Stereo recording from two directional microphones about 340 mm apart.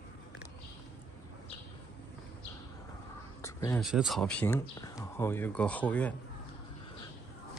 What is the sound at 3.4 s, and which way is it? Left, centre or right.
Speech, centre.